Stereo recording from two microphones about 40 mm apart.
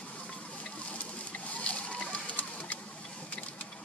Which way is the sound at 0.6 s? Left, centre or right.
Left.